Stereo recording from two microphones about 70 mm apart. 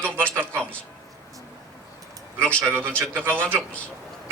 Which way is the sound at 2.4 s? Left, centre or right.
Centre.